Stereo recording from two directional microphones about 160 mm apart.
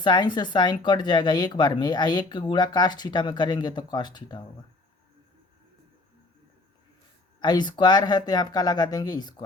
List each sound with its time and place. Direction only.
0.0 s speech: 30° left (ahead or behind)
7.3 s speech: 25° left (ahead or behind)